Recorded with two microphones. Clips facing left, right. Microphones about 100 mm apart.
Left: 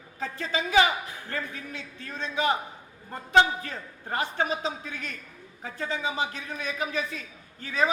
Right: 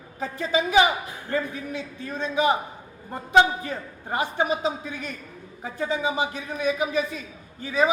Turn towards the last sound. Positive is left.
turn(degrees=-10)  # may be behind; listen again after turning